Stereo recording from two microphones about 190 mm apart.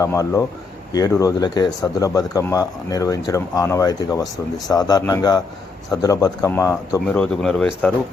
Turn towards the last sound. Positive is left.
turn(degrees=5)  # may be behind; listen again after turning